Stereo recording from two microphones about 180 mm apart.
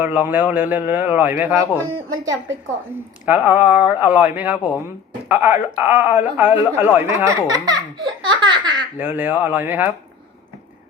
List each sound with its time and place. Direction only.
0.0 s a man's voice: 10° right (ahead or behind)
1.9 s a man's voice: 20° right (ahead or behind)
9.0 s a man's voice: 10° right (ahead or behind)